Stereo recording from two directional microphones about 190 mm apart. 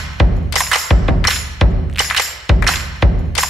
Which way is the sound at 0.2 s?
Centre (ahead or behind).